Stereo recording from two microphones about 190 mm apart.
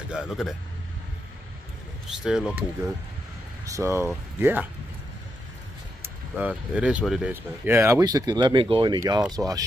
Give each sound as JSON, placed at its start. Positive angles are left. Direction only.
{"t": 0.1, "sound": "speech", "side_deg": -5}
{"t": 2.0, "sound": "speech", "side_deg": -5}
{"t": 6.3, "sound": "speech", "side_deg": -5}